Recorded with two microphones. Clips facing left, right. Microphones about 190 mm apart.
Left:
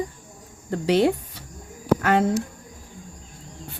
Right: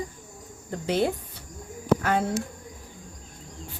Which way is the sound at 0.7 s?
85° left.